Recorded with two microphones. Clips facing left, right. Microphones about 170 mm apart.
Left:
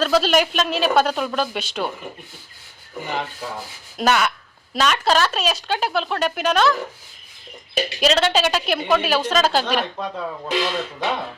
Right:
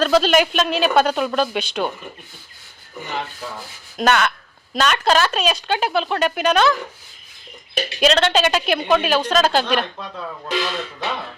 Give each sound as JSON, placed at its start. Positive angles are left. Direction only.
{"t": 0.0, "sound": "speech", "side_deg": 0}
{"t": 3.4, "sound": "speech", "side_deg": 10}
{"t": 8.0, "sound": "speech", "side_deg": 5}
{"t": 10.0, "sound": "speech", "side_deg": 15}